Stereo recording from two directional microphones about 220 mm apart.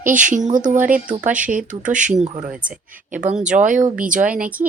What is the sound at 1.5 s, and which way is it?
Speech, 35° right (ahead or behind).